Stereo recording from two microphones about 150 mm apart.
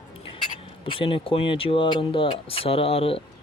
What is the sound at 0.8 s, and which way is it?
Speech, 35° left (ahead or behind).